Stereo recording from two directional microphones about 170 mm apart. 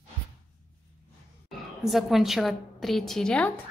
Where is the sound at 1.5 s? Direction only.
Centre (ahead or behind).